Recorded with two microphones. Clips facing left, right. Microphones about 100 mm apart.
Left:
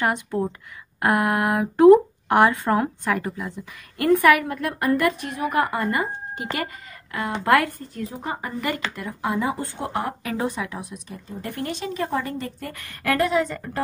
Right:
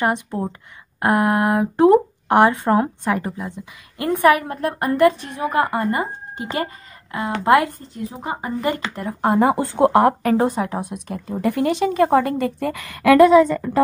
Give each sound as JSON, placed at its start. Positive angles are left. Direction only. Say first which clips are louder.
{"t": 0.0, "sound": "a woman's voice", "louder": "right 2 dB", "side_deg": -25}
{"t": 8.9, "sound": "speech", "louder": "right 7 dB", "side_deg": -45}
{"t": 10.2, "sound": "speech", "louder": "right 8 dB", "side_deg": -45}
{"t": 10.9, "sound": "speech", "louder": "right 8 dB", "side_deg": -60}